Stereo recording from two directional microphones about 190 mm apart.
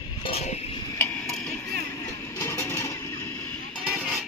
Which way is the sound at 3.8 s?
5° right (ahead or behind).